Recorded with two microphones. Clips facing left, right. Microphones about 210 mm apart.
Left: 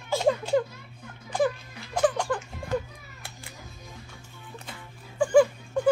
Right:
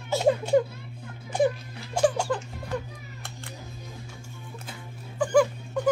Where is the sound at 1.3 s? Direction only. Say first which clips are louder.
Right 2 dB; 25° right (ahead or behind).